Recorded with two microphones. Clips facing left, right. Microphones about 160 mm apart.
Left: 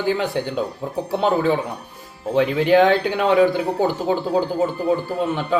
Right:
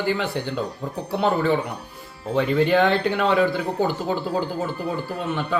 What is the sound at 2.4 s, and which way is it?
Speech, 10° left (ahead or behind).